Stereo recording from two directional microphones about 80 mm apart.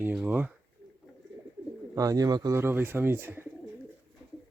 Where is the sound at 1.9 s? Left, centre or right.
Right.